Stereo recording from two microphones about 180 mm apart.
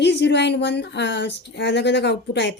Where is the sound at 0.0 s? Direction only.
75° left (ahead or behind).